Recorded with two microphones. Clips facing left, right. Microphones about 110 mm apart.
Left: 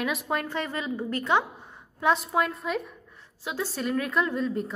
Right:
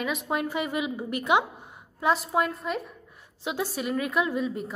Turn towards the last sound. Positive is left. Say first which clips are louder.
# even
turn(degrees=-5)  # may be behind; listen again after turning